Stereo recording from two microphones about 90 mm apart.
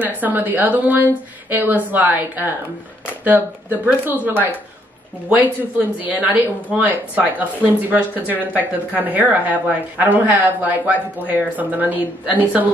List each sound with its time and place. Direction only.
0.0 s speech: 20° right (ahead or behind)
6.0 s speech: 15° right (ahead or behind)